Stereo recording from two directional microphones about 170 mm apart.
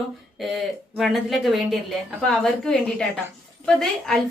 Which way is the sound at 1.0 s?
Centre (ahead or behind).